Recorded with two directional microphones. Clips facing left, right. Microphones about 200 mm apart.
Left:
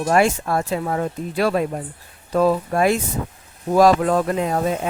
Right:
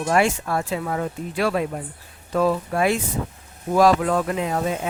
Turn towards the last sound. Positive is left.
turn(degrees=40)  # may be behind; listen again after turning